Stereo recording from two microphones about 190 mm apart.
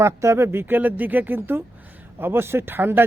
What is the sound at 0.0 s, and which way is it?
A man's voice, 15° right (ahead or behind).